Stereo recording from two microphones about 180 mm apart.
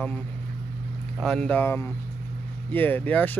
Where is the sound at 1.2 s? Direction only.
5° left (ahead or behind).